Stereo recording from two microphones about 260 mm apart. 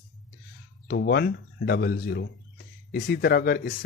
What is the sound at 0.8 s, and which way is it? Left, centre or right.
Speech, left.